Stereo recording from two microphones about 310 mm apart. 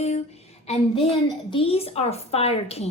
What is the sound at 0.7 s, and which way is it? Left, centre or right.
A woman's voice, centre.